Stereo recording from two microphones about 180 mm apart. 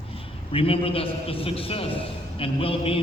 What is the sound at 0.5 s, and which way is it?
A man's voice, 30° left (ahead or behind).